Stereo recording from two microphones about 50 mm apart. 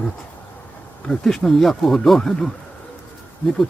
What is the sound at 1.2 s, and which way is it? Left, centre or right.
Speech, centre.